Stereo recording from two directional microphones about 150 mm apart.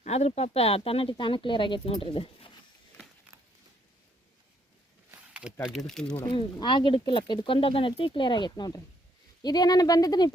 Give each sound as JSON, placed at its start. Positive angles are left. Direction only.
{"t": 0.0, "sound": "speech", "side_deg": 45}
{"t": 5.3, "sound": "a sound", "side_deg": -5}
{"t": 5.6, "sound": "speech", "side_deg": 0}
{"t": 6.2, "sound": "speech", "side_deg": 30}